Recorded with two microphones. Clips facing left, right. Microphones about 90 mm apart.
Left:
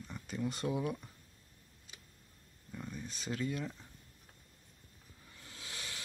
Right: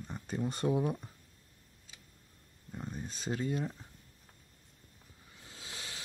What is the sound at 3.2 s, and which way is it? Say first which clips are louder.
Speech: right 3 dB; 30° right (ahead or behind).